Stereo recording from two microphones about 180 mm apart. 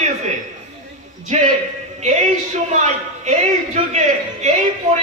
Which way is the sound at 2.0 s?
40° right (ahead or behind).